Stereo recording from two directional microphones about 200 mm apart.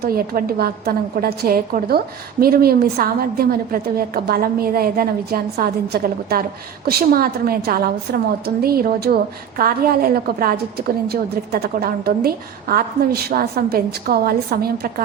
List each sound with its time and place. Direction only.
0.0 s a woman's voice: 50° right (ahead or behind)